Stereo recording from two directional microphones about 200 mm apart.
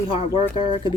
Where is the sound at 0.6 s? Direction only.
20° right (ahead or behind).